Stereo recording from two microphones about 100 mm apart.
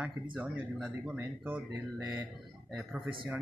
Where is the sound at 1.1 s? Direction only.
20° right (ahead or behind).